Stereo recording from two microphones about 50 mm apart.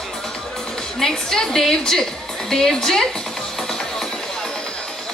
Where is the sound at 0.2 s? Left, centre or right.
Centre.